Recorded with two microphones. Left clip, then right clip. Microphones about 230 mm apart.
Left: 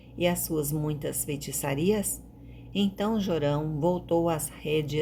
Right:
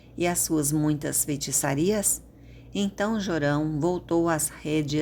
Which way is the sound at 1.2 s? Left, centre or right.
Right.